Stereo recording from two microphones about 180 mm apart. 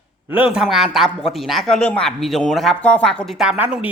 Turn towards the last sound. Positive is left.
turn(degrees=-5)  # may be behind; listen again after turning